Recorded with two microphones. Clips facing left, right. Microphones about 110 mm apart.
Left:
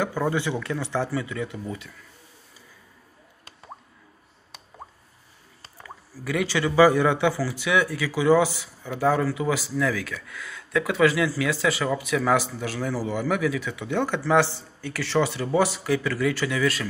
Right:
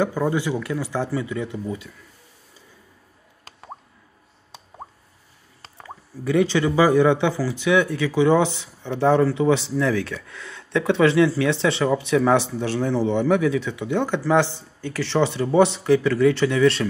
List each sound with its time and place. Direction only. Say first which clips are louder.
0.0 s speech: right 3 dB; 15° right (ahead or behind)
5.8 s speech: right 4 dB; 20° right (ahead or behind)